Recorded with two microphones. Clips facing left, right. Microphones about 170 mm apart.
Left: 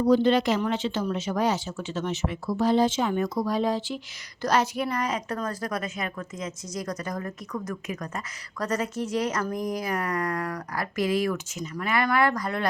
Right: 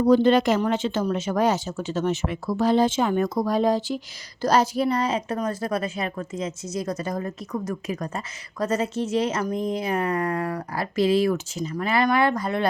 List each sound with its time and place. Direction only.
0.0 s speech: 50° right (ahead or behind)
2.2 s a child's voice: 70° right (ahead or behind); by 12.6 s 25° right (ahead or behind)